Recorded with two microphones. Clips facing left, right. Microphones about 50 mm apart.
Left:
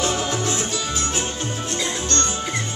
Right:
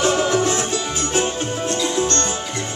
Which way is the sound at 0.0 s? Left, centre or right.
Right.